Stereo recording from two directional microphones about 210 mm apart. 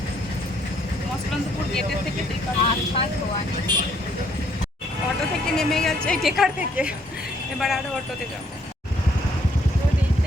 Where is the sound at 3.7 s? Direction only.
20° right (ahead or behind).